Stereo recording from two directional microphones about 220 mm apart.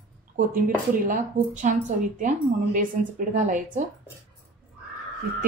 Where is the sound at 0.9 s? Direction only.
35° right (ahead or behind).